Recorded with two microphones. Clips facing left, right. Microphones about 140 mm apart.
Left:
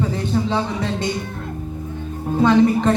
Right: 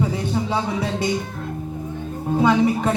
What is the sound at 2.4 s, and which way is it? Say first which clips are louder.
Speech: left 3 dB; 10° right (ahead or behind).